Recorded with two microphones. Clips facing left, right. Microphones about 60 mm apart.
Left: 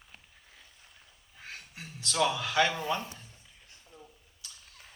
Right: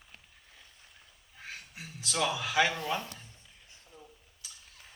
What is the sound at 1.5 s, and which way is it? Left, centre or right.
A man's voice, centre.